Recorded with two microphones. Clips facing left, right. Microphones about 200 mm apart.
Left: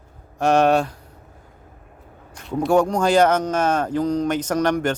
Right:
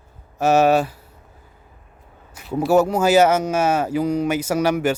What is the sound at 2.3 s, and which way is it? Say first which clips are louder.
Speech: right 1 dB; 5° right (ahead or behind).